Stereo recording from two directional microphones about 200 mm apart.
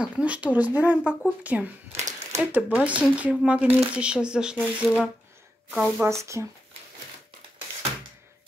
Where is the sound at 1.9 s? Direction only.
35° right (ahead or behind).